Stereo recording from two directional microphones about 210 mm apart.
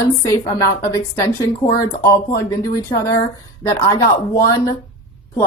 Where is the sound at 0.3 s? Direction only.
15° left (ahead or behind).